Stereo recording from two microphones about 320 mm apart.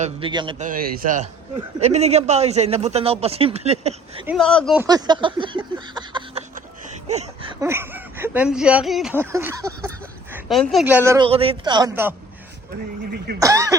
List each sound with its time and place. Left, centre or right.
0.0 s a man's voice: centre
4.3 s a man's voice: centre
7.6 s speech: centre
13.4 s speech: centre